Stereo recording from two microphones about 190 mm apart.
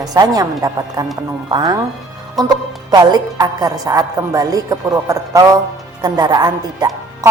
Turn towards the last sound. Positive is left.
turn(degrees=-20)  # may be behind; listen again after turning